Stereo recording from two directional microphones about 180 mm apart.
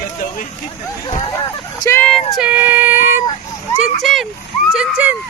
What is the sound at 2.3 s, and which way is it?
Child singing, 5° right (ahead or behind).